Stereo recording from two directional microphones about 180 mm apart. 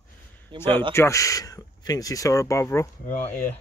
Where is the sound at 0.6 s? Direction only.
10° left (ahead or behind).